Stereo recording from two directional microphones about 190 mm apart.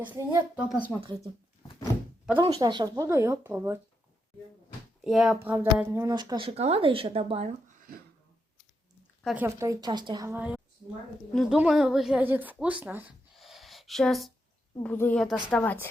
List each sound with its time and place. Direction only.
0.0 s speech: 10° right (ahead or behind)
2.4 s a woman's voice: 20° right (ahead or behind)
5.0 s a woman's voice: centre (ahead or behind); by 8.0 s 45° right (ahead or behind)
9.2 s speech: 10° right (ahead or behind)
13.3 s a sound: centre (ahead or behind)
14.8 s speech: 10° left (ahead or behind)